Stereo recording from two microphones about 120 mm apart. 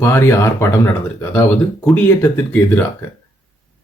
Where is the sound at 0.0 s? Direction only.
20° left (ahead or behind).